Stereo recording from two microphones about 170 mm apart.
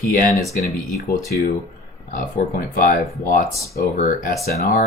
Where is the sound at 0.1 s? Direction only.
55° left (ahead or behind).